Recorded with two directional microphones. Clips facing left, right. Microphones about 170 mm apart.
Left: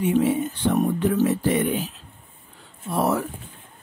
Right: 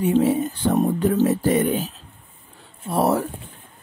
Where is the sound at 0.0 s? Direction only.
35° right (ahead or behind).